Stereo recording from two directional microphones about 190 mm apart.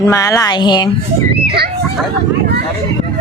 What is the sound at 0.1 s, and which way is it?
Speech, 15° left (ahead or behind).